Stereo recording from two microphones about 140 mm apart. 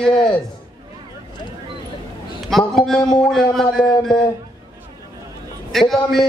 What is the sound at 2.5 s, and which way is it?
A man's voice, centre (ahead or behind).